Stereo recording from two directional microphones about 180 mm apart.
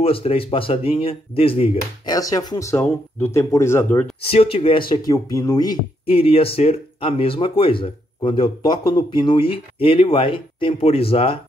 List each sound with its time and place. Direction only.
0.0 s speech: 30° left (ahead or behind)
2.1 s speech: 20° left (ahead or behind)
4.2 s speech: 30° left (ahead or behind)
6.0 s speech: 30° left (ahead or behind)